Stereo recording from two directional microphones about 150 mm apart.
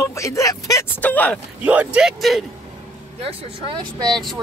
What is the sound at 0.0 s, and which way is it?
Speech, 20° left (ahead or behind).